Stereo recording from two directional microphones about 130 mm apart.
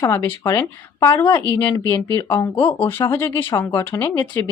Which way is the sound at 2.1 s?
25° left (ahead or behind).